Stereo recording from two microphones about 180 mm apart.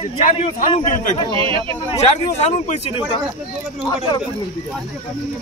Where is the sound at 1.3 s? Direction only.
30° right (ahead or behind).